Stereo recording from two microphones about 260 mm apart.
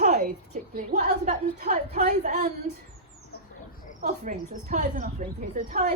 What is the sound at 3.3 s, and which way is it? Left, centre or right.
Rodents, left.